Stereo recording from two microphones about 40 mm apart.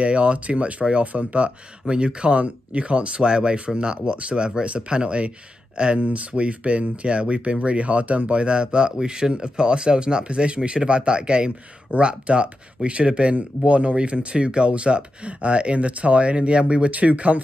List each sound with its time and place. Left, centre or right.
0.0 s speech: right
1.9 s speech: right
6.0 s speech: right